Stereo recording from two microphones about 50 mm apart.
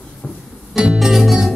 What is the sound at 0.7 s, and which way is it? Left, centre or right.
Music, centre.